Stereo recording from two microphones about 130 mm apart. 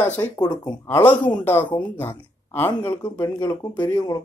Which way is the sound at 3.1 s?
30° left (ahead or behind).